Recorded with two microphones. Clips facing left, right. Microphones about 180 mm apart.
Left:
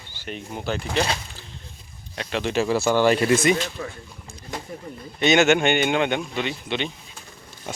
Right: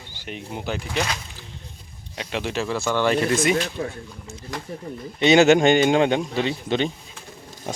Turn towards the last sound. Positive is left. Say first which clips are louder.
# right 4 dB
turn(degrees=-40)  # may be behind; listen again after turning